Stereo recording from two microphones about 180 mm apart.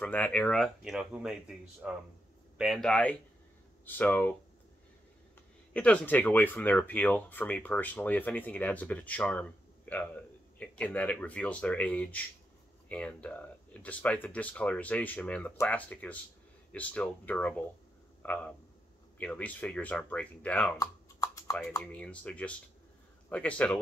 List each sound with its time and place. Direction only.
0.0 s speech: 10° left (ahead or behind)
5.7 s a man's voice: 5° left (ahead or behind)
20.8 s computer keyboard: 20° left (ahead or behind)
21.5 s speech: 10° left (ahead or behind)